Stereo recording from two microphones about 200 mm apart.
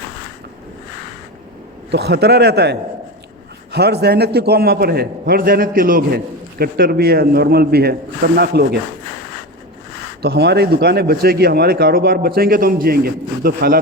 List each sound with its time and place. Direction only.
1.9 s a man's voice: 55° right (ahead or behind)
10.2 s speech: 55° right (ahead or behind)